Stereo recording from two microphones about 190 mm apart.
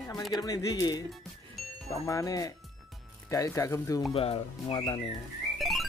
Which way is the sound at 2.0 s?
15° left (ahead or behind).